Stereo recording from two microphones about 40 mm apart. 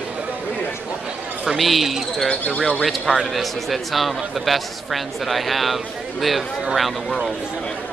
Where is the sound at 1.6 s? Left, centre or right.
Centre.